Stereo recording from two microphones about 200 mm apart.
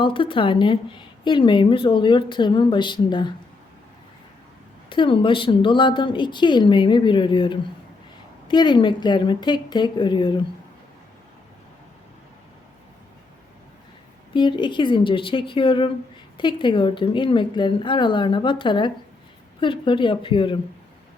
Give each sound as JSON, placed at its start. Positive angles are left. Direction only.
{"t": 0.0, "sound": "a woman's voice", "side_deg": 25}
{"t": 4.9, "sound": "a woman's voice", "side_deg": 25}
{"t": 14.3, "sound": "a woman's voice", "side_deg": 25}